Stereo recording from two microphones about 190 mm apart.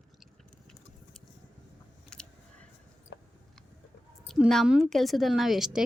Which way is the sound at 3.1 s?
65° left (ahead or behind).